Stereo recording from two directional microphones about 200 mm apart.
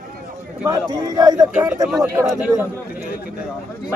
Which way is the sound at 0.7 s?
20° right (ahead or behind).